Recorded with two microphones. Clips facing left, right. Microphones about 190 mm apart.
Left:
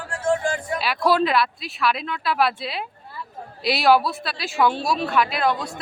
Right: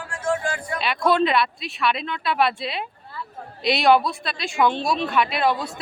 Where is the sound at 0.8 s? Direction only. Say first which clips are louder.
Right 1 dB; 5° left (ahead or behind).